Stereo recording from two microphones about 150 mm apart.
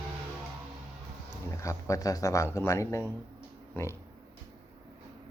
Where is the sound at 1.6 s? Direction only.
20° left (ahead or behind).